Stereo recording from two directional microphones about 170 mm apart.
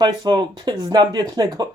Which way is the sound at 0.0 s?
25° right (ahead or behind).